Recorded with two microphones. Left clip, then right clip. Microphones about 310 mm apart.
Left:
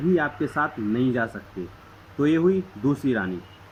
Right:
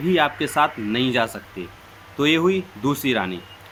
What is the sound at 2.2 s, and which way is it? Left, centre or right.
Speech, centre.